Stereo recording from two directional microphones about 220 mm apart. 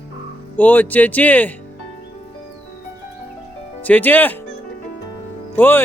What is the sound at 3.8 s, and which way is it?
Speech, 10° left (ahead or behind).